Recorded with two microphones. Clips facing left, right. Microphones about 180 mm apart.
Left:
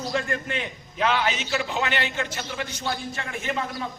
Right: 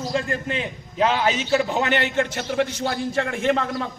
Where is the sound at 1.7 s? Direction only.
55° right (ahead or behind).